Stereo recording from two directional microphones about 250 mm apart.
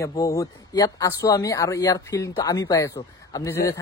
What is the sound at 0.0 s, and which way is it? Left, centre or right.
Speech, centre.